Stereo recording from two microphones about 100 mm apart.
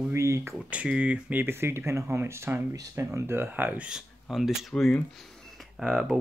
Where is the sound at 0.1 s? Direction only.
30° right (ahead or behind).